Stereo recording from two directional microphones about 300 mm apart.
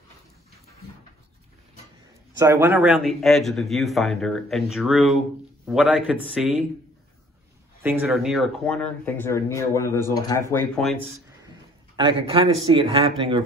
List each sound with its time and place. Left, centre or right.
2.3 s speech: centre
7.8 s speech: centre
12.0 s speech: centre